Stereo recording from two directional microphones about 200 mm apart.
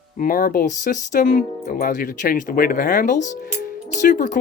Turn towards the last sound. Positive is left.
turn(degrees=40)  # may be behind; listen again after turning